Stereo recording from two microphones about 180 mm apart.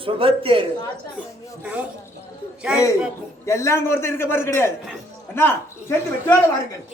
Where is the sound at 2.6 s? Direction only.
5° right (ahead or behind).